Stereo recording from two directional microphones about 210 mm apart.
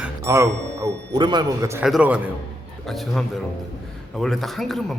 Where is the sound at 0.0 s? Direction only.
15° right (ahead or behind).